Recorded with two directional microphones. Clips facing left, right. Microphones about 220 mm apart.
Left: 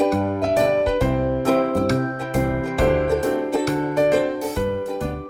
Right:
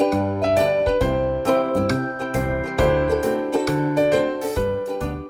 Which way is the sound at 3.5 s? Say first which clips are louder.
Right 1 dB; centre (ahead or behind).